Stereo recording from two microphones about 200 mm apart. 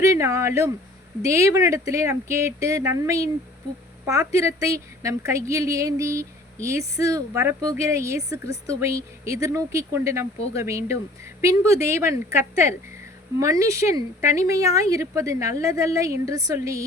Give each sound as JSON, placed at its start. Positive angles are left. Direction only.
{"t": 0.0, "sound": "speech", "side_deg": -15}